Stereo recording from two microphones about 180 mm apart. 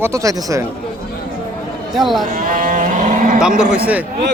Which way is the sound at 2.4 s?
45° right (ahead or behind).